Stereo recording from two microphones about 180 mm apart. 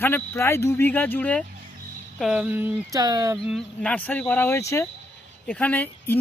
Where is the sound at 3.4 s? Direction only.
Centre (ahead or behind).